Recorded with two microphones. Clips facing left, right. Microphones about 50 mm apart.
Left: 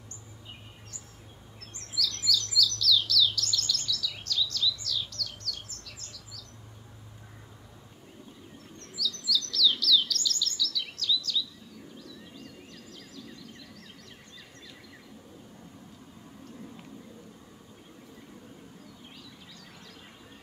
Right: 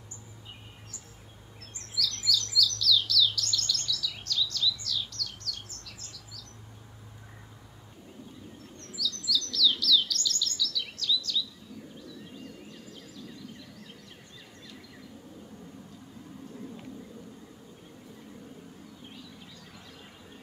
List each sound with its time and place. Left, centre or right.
1.6 s chirp: centre
8.7 s chirp: centre
12.0 s a sound: centre